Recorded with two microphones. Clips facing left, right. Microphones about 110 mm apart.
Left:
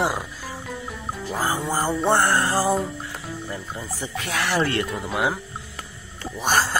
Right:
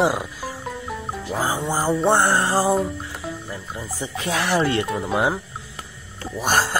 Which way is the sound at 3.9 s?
25° right (ahead or behind).